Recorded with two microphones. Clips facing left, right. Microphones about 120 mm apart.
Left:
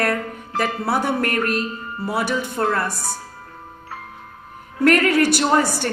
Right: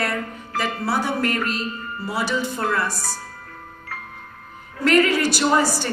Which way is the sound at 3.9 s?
25° left (ahead or behind).